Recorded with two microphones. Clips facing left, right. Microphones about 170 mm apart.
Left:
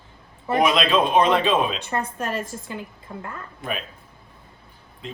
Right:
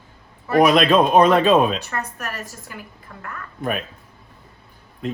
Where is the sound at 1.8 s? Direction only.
25° left (ahead or behind).